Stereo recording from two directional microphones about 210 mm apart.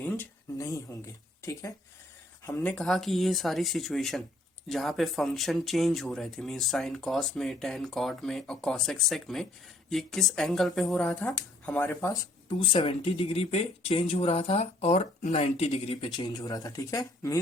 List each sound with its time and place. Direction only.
0.0 s speech: 10° left (ahead or behind)
12.5 s speech: 25° left (ahead or behind)